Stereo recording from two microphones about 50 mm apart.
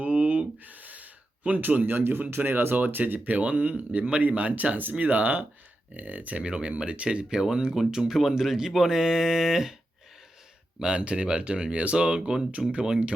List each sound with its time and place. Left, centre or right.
0.0 s gasp: right
2.3 s speech: right
2.7 s speech: right
6.4 s speech: centre
10.8 s speech: centre